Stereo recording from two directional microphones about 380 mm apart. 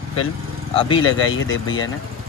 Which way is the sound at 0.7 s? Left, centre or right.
Centre.